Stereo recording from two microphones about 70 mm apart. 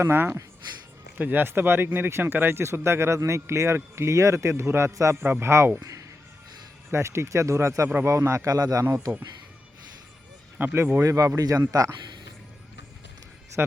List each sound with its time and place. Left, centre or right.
0.0 s speech: right
1.2 s speech: right
6.9 s speech: right
8.4 s speech: right
8.8 s speech: right
10.6 s speech: right
11.0 s speech: right
13.6 s speech: right